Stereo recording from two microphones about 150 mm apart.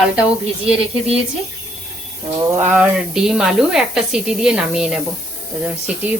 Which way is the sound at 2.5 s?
15° right (ahead or behind).